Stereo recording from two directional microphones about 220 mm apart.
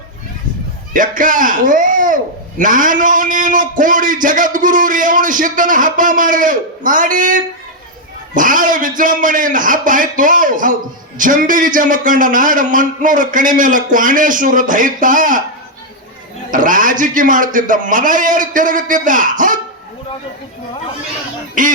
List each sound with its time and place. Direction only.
0.9 s a man's voice: 35° right (ahead or behind)
16.5 s a man's voice: 35° right (ahead or behind)
21.6 s a man's voice: 35° right (ahead or behind)